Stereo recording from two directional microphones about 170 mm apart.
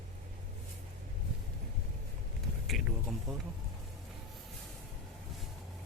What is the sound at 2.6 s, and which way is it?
Speech, centre (ahead or behind).